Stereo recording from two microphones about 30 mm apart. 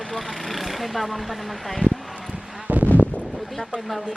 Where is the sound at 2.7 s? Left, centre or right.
Right.